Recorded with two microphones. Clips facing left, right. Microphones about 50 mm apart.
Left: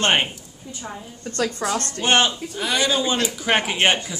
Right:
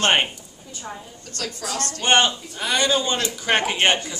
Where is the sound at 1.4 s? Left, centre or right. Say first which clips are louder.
Left 5 dB; left.